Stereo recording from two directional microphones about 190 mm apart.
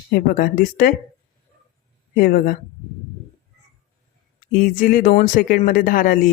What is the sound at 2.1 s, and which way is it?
Speech, 50° left (ahead or behind).